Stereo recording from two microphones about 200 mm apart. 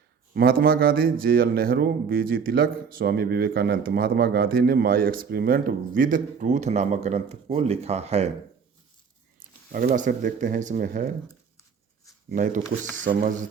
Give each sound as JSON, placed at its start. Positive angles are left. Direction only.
{"t": 0.3, "sound": "speech", "side_deg": -50}
{"t": 9.7, "sound": "speech", "side_deg": -40}
{"t": 12.3, "sound": "speech", "side_deg": -40}